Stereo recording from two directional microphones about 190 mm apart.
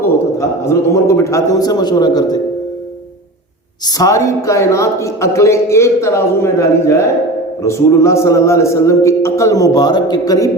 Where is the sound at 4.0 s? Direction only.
15° left (ahead or behind).